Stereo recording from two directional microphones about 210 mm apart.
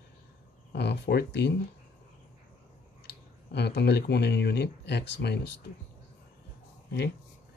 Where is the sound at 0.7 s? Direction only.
50° left (ahead or behind).